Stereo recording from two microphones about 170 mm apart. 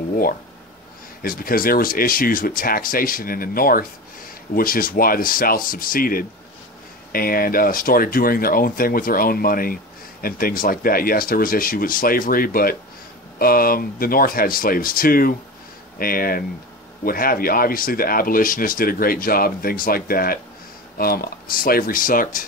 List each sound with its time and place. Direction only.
1.2 s speech: 60° left (ahead or behind)